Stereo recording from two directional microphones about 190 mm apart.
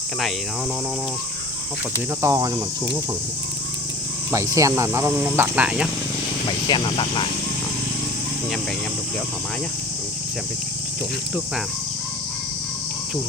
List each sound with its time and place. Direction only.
2.2 s speech: 15° right (ahead or behind)
4.3 s speech: 15° right (ahead or behind)
6.7 s speech: 25° left (ahead or behind)